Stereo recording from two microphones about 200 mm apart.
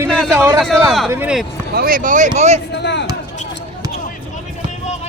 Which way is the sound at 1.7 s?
45° right (ahead or behind).